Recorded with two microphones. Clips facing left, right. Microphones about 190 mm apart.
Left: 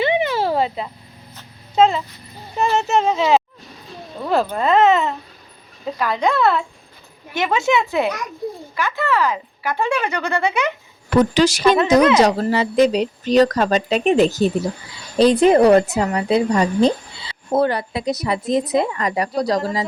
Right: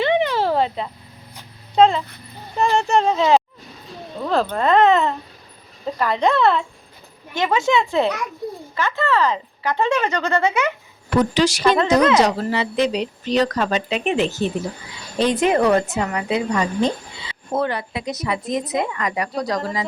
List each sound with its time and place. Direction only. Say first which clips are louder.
0.0 s a sound: even; 10° left (ahead or behind)
1.7 s a woman's voice: right 1 dB; 5° left (ahead or behind)
11.3 s speech: left 2 dB; 45° left (ahead or behind)
11.9 s a woman's voice: left 2 dB; 20° left (ahead or behind)
12.2 s a woman's voice: left 3 dB; 40° left (ahead or behind)